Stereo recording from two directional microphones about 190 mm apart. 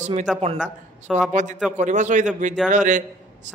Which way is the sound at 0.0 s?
40° right (ahead or behind).